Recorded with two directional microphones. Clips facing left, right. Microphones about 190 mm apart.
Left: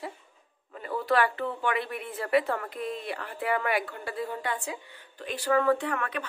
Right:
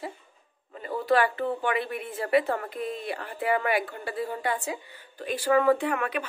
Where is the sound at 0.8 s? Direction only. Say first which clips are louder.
Right 2 dB; 25° right (ahead or behind).